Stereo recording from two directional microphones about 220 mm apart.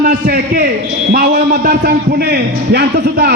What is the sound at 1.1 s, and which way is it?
A man's voice, 45° right (ahead or behind).